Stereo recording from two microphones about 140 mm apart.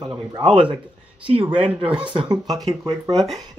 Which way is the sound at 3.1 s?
Centre (ahead or behind).